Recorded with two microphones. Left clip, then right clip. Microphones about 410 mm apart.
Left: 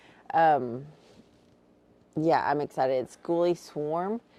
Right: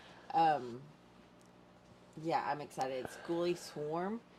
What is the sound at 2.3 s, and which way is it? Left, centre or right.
Speech, left.